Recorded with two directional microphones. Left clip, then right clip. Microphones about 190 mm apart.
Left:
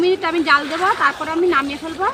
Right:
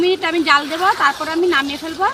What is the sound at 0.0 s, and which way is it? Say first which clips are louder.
A woman's voice: right 1 dB; 25° right (ahead or behind).